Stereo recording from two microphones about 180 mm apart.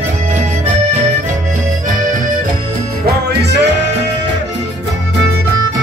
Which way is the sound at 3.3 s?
70° right (ahead or behind).